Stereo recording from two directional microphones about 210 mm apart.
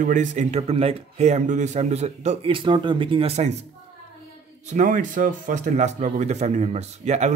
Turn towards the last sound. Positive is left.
turn(degrees=-30)  # may be behind; listen again after turning